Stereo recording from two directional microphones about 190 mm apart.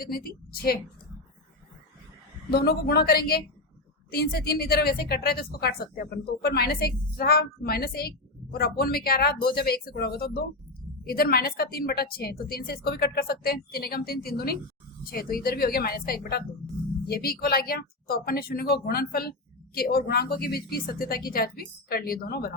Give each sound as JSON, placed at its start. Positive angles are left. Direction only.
{"t": 0.0, "sound": "a woman's voice", "side_deg": 50}
{"t": 2.5, "sound": "a woman's voice", "side_deg": 55}